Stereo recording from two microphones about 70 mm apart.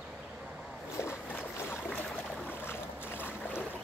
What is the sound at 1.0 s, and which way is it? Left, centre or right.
Boat, left.